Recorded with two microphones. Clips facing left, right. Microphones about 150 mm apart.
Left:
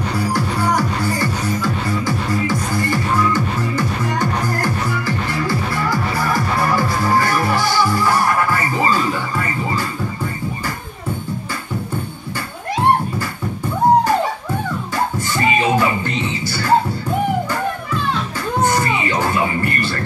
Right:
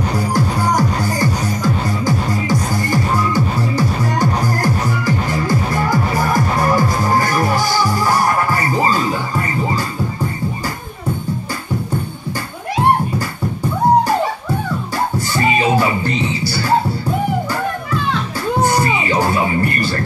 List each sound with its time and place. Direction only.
0.3 s music: 40° right (ahead or behind)
15.1 s music: 35° right (ahead or behind)